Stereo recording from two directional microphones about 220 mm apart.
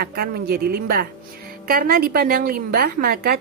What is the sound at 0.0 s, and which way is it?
A woman's voice, 45° right (ahead or behind).